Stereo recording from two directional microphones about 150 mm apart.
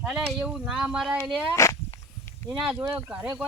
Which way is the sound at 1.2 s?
20° left (ahead or behind).